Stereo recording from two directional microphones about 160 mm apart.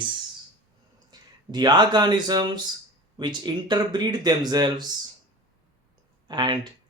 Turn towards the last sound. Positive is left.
turn(degrees=-30)  # may be behind; listen again after turning